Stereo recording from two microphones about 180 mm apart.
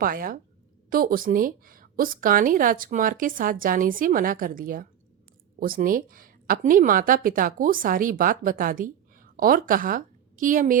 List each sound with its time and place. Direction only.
0.0 s a woman's voice: 50° right (ahead or behind)